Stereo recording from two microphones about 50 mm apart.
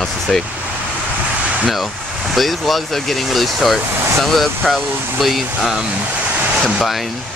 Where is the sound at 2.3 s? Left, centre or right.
Centre.